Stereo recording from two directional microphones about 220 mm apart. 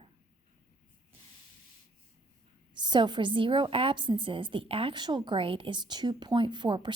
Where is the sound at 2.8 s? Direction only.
20° right (ahead or behind).